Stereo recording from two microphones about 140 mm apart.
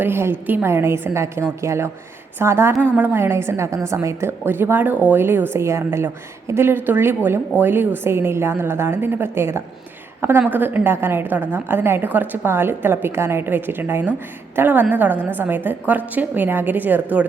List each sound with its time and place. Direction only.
0.0 s a woman's voice: 15° right (ahead or behind)